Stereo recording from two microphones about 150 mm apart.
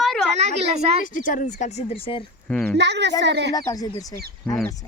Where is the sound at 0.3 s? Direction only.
45° right (ahead or behind).